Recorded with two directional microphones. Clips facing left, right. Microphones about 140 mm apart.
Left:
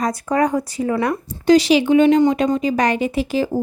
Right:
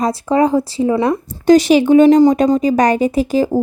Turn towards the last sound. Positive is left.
turn(degrees=-40)  # may be behind; listen again after turning